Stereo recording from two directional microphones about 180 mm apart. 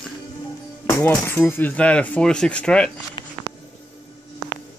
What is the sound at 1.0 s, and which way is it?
Speech, 10° left (ahead or behind).